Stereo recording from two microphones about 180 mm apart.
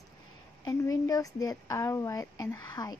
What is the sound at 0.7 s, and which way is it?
Speech, 20° left (ahead or behind).